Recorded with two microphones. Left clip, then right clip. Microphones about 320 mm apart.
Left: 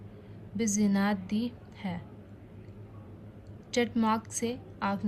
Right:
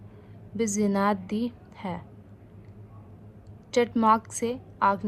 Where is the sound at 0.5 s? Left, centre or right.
Centre.